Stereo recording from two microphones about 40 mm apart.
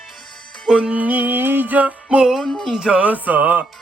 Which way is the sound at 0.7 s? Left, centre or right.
Right.